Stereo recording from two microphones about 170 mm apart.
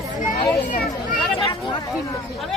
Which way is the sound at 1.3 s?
35° left (ahead or behind).